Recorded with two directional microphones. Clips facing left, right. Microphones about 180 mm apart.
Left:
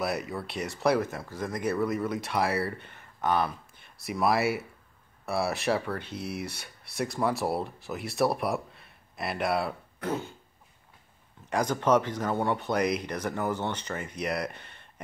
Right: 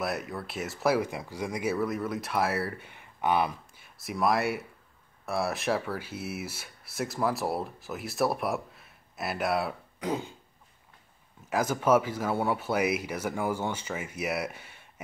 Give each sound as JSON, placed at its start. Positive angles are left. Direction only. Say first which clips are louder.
{"t": 0.0, "sound": "speech", "louder": "left 2 dB", "side_deg": 0}
{"t": 9.9, "sound": "a sound", "louder": "right 1 dB", "side_deg": -15}
{"t": 11.5, "sound": "speech", "louder": "even", "side_deg": -5}